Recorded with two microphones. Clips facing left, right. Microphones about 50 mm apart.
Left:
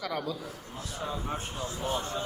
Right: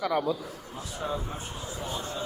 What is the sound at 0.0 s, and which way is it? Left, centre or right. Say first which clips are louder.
Speech: right 6 dB; right.